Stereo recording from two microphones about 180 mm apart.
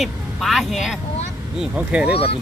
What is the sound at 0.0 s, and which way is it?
Speech, centre (ahead or behind).